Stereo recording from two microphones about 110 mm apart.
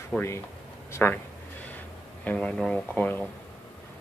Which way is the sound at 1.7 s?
15° left (ahead or behind).